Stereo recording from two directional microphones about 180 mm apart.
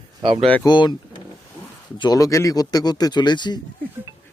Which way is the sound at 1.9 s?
20° left (ahead or behind).